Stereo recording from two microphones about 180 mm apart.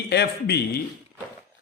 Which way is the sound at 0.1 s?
65° left (ahead or behind).